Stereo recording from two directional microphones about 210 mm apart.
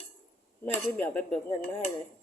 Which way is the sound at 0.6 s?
10° left (ahead or behind).